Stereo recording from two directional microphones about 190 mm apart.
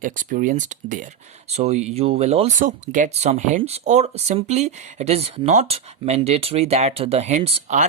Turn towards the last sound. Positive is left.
turn(degrees=-35)  # may be behind; listen again after turning